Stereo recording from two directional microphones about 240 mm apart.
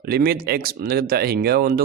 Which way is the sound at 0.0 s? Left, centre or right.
Right.